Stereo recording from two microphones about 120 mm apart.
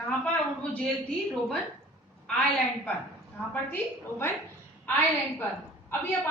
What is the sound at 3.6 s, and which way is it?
Speech, 20° left (ahead or behind).